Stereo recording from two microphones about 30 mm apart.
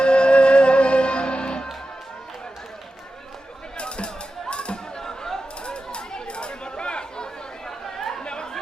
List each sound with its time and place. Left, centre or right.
0.0 s music: left
3.8 s music: left
4.9 s chatter: centre
5.6 s chatter: left
7.7 s chatter: centre
8.2 s chatter: left